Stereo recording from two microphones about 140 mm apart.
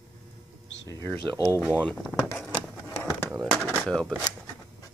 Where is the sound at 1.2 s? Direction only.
25° right (ahead or behind).